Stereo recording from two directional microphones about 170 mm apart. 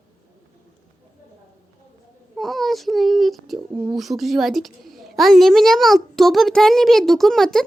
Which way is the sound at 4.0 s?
Centre (ahead or behind).